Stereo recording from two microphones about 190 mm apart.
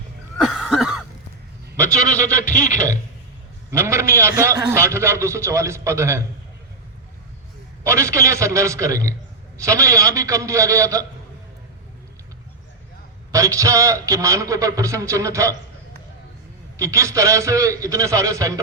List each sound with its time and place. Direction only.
0.3 s a sound: centre (ahead or behind)
1.7 s a man's voice: 15° right (ahead or behind)
2.4 s a sound: 45° left (ahead or behind)
3.7 s a man's voice: 15° right (ahead or behind)
7.9 s a man's voice: 15° right (ahead or behind)
13.3 s a man's voice: 15° right (ahead or behind)
16.7 s a man's voice: 15° right (ahead or behind)